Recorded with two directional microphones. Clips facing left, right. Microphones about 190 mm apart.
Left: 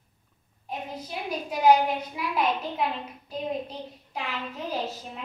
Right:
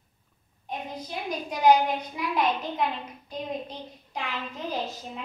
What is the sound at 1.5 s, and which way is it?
Speech, 5° left (ahead or behind).